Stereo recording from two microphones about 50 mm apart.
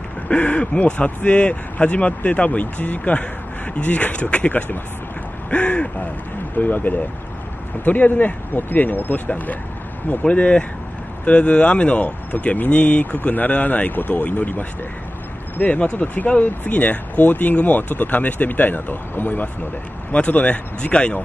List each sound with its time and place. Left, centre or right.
0.3 s speech: left
10.2 s speech: left
20.1 s speech: left